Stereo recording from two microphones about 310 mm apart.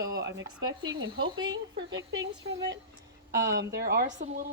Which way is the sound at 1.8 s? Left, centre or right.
Right.